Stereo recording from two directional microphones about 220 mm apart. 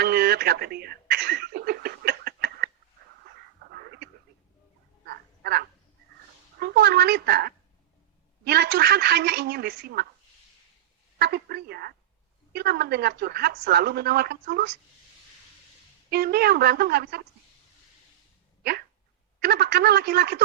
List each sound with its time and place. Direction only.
0.0 s a sound: 45° right (ahead or behind)
3.7 s a sound: 45° right (ahead or behind)
6.6 s a woman's voice: 45° right (ahead or behind)
11.2 s a woman's voice: 45° right (ahead or behind)
16.0 s a woman's voice: 45° right (ahead or behind)
19.4 s a woman's voice: 45° right (ahead or behind)